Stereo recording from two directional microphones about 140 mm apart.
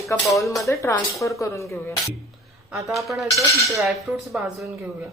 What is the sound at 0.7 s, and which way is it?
Speech, 20° left (ahead or behind).